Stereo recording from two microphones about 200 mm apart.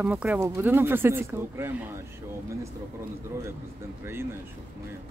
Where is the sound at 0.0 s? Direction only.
10° right (ahead or behind).